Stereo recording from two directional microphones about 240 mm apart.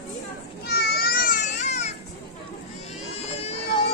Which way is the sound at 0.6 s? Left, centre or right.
Left.